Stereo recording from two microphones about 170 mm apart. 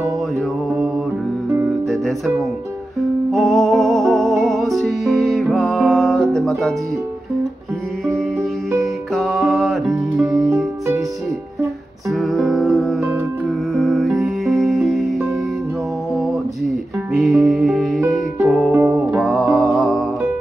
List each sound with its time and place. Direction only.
1.9 s music: centre (ahead or behind)
8.1 s music: centre (ahead or behind)
12.1 s music: centre (ahead or behind)
17.2 s music: centre (ahead or behind)
18.7 s music: 15° right (ahead or behind)
19.1 s music: centre (ahead or behind)